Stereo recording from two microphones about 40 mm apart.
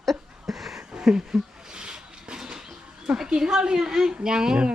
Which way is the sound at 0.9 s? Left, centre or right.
Centre.